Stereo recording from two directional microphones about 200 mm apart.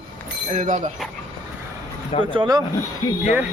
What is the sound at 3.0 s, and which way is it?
Speech, 15° left (ahead or behind).